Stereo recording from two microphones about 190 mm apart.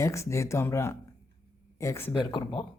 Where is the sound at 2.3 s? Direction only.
25° left (ahead or behind).